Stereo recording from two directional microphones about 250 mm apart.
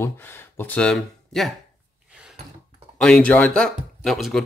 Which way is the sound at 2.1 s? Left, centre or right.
Centre.